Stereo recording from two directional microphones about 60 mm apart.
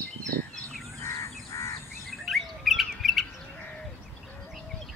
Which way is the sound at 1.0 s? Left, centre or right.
Left.